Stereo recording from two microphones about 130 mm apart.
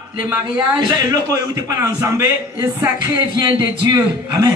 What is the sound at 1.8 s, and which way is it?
Speech, 25° right (ahead or behind).